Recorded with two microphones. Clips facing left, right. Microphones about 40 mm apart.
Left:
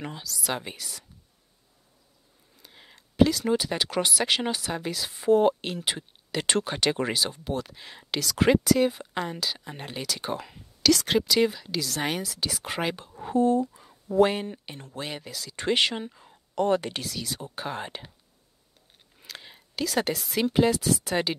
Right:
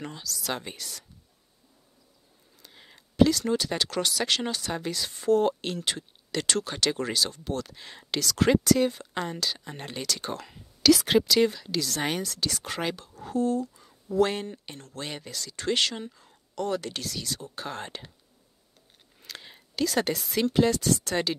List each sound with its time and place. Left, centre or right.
0.0 s speech: centre
2.5 s speech: centre
10.9 s speech: centre; by 13.8 s left
14.2 s speech: centre
15.5 s speech: left
17.0 s speech: centre
19.1 s a sound: centre
20.4 s speech: centre